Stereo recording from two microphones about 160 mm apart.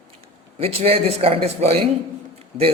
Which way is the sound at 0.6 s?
35° right (ahead or behind).